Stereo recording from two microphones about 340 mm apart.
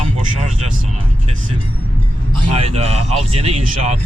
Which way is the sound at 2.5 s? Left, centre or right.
Centre.